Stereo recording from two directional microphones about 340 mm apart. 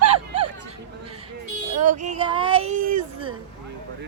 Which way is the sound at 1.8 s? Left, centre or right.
Right.